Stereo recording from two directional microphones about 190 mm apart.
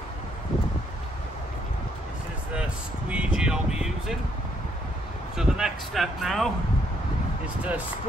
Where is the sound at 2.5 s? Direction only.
5° right (ahead or behind).